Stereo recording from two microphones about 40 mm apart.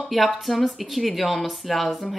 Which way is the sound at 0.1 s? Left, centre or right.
Centre.